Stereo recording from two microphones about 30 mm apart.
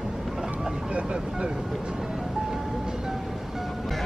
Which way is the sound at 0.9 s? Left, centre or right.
Right.